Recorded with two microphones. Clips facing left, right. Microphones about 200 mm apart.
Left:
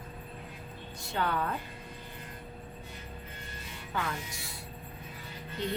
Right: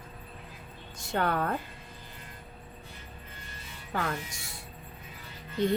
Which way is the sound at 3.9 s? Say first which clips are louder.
Right 3 dB; 40° right (ahead or behind).